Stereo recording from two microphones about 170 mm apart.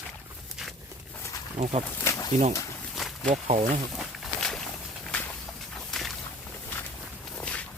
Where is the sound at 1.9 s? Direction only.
20° left (ahead or behind).